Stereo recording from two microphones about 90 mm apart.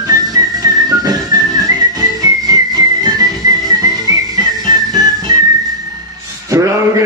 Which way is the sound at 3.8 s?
45° right (ahead or behind).